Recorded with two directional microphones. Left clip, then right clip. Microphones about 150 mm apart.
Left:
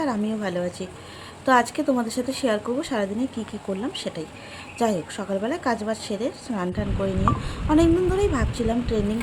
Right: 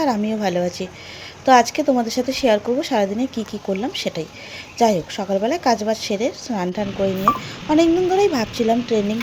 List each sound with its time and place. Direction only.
0.0 s a woman's voice: 20° right (ahead or behind)